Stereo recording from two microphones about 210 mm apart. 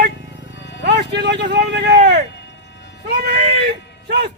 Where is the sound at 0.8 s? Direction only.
55° right (ahead or behind).